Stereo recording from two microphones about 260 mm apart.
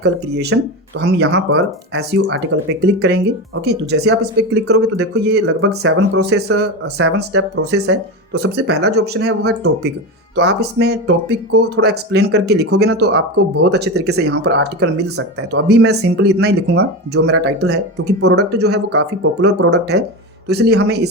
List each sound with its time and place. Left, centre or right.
0.0 s speech: right
6.6 s speech: right